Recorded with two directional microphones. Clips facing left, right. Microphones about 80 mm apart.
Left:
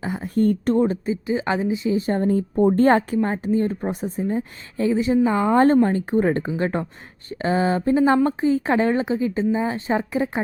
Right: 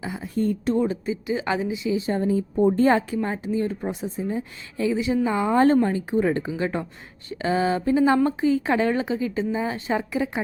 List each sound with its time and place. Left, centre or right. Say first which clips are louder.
0.0 s a woman's voice: left 5 dB; left
3.2 s speech: left 4 dB; left
3.4 s a woman's voice: left 4 dB; left
3.8 s speech: left 3 dB; centre
4.2 s a woman's voice: left 3 dB; left